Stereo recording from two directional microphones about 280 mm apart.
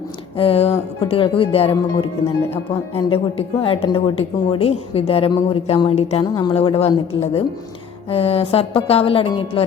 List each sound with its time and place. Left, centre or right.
0.3 s a woman's voice: centre
8.1 s a woman's voice: left